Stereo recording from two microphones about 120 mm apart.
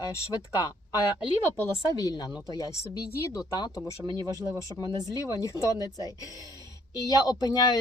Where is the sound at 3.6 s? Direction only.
40° left (ahead or behind).